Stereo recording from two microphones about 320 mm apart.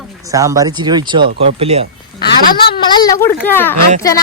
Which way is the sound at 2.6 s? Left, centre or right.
Left.